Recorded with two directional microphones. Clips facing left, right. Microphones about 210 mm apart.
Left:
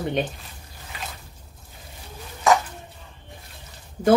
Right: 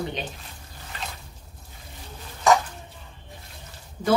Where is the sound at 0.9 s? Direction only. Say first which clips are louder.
Even; 10° left (ahead or behind).